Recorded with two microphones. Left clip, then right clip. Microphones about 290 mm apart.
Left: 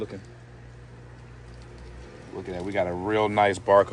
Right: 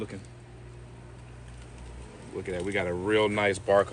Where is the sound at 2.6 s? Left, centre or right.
Left.